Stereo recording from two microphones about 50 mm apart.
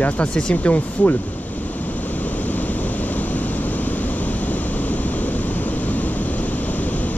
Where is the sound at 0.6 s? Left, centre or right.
Left.